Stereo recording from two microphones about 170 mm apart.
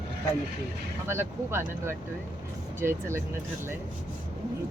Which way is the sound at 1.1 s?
15° right (ahead or behind).